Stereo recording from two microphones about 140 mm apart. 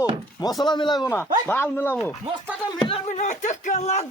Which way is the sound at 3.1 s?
60° left (ahead or behind).